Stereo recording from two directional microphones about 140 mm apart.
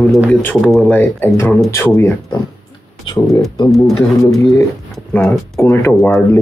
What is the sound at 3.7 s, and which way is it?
Speech, centre (ahead or behind).